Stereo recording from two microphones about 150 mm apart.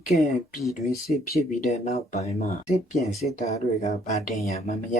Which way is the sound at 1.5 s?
50° left (ahead or behind).